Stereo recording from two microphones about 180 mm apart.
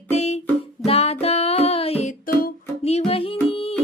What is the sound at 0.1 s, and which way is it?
Music, 40° left (ahead or behind).